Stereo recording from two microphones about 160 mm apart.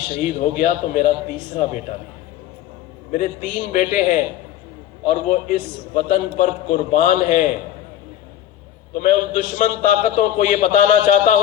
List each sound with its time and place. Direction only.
0.2 s a man's voice: 45° left (ahead or behind)
3.1 s a man's voice: 55° left (ahead or behind)
9.0 s a man's voice: 50° left (ahead or behind)